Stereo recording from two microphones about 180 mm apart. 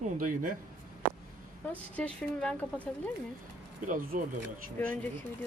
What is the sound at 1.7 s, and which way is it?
Speech, 10° left (ahead or behind).